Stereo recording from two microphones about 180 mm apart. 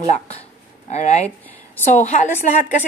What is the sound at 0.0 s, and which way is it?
A woman's voice, 40° left (ahead or behind).